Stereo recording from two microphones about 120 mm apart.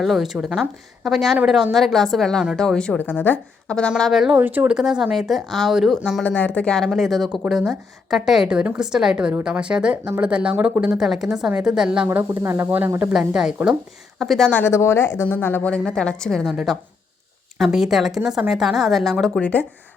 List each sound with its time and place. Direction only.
0.0 s speech: centre (ahead or behind)
3.0 s a woman's voice: 15° left (ahead or behind); by 4.4 s 5° right (ahead or behind)
4.4 s speech: 15° right (ahead or behind)
6.2 s speech: 15° left (ahead or behind); by 12.0 s 5° right (ahead or behind)
12.0 s speech: 20° right (ahead or behind)
13.1 s speech: 5° right (ahead or behind)
14.5 s speech: 20° left (ahead or behind)